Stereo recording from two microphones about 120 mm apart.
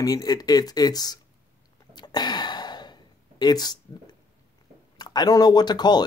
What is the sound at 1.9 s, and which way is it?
Gasp, 35° left (ahead or behind).